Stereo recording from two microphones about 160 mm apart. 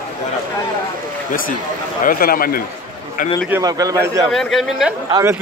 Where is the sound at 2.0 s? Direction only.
65° left (ahead or behind).